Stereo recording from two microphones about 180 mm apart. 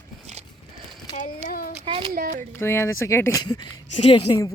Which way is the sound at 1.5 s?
55° left (ahead or behind).